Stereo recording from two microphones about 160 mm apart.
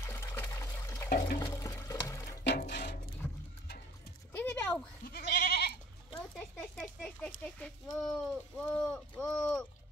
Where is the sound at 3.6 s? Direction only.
80° left.